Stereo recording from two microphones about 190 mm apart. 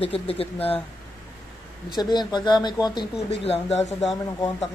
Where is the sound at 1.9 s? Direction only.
20° left (ahead or behind).